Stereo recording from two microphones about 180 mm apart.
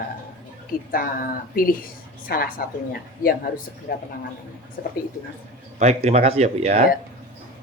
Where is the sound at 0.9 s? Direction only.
55° left (ahead or behind).